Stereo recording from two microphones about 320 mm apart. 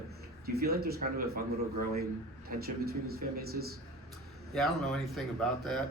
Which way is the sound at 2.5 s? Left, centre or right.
Right.